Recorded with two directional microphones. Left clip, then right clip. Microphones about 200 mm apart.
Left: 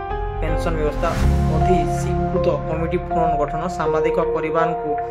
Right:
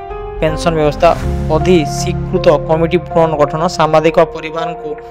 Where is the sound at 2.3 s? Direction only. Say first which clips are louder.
Right 12 dB; 40° right (ahead or behind).